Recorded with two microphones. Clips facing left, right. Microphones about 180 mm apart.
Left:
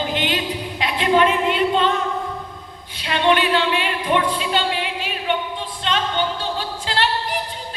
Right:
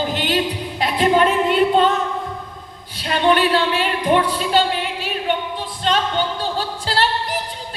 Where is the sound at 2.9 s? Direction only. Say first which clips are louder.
Right 1 dB; 40° right (ahead or behind).